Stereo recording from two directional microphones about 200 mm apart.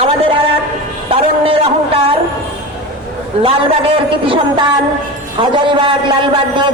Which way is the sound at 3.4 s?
25° right (ahead or behind).